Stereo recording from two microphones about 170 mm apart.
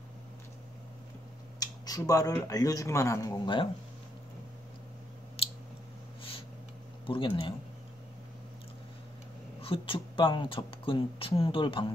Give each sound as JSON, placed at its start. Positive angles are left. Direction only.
{"t": 1.6, "sound": "speech", "side_deg": 20}
{"t": 5.4, "sound": "clicking", "side_deg": 35}
{"t": 7.1, "sound": "speech", "side_deg": 30}
{"t": 9.6, "sound": "speech", "side_deg": 30}